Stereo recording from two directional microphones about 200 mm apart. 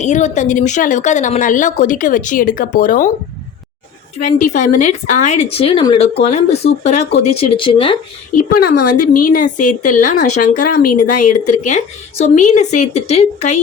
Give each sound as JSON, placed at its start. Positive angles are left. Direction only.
{"t": 0.0, "sound": "a woman's voice", "side_deg": 35}
{"t": 4.2, "sound": "a woman's voice", "side_deg": 35}
{"t": 8.4, "sound": "a woman's voice", "side_deg": 45}